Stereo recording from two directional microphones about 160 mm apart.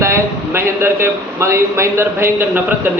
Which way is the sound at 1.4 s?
15° right (ahead or behind).